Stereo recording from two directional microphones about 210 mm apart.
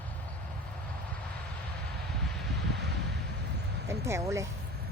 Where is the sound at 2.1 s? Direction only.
Centre (ahead or behind).